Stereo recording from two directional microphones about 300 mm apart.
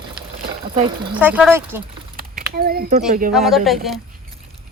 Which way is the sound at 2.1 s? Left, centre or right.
Right.